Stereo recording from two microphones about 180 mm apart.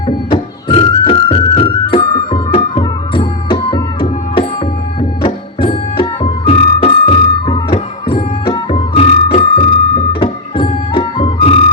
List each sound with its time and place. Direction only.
0.1 s music: 30° left (ahead or behind)